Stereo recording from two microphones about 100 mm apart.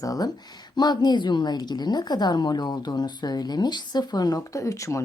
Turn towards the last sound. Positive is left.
turn(degrees=30)  # may be behind; listen again after turning